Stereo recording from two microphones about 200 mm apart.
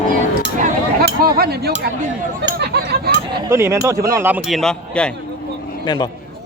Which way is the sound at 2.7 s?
55° right (ahead or behind).